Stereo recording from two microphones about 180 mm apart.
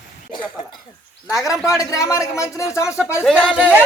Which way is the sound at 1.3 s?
20° left (ahead or behind).